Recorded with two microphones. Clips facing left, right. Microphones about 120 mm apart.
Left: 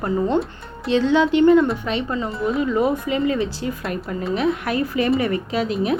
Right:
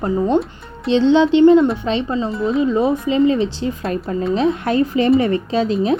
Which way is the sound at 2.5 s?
20° right (ahead or behind).